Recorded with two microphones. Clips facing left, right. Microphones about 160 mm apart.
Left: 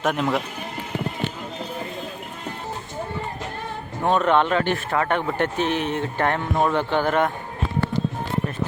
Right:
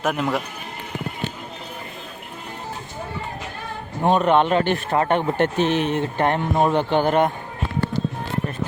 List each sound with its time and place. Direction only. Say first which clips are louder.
0.0 s speech: even; centre (ahead or behind)
4.0 s speech: right 2 dB; 15° right (ahead or behind)